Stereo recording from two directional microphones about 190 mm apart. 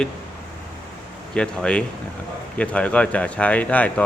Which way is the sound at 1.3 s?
5° left (ahead or behind).